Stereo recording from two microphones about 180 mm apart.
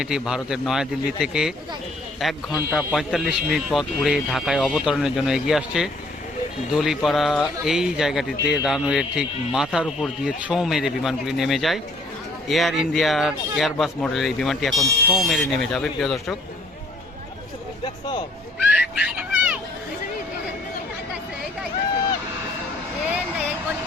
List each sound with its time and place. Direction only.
0.0 s a man's voice: 5° right (ahead or behind)
17.8 s speech: 25° left (ahead or behind)
18.7 s a sound: 5° right (ahead or behind)